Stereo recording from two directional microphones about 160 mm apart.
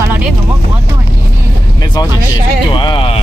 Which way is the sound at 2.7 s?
30° left (ahead or behind).